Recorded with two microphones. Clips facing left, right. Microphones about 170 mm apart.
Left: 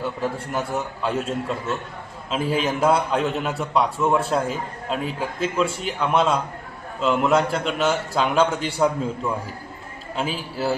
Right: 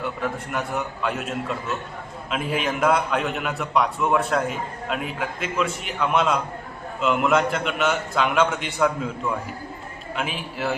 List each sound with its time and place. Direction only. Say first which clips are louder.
0.2 s a man's voice: left 2 dB; 30° left (ahead or behind)
10.2 s a man's voice: left 3 dB; 30° left (ahead or behind)